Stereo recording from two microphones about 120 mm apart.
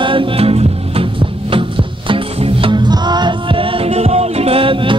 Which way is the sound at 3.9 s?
60° right (ahead or behind).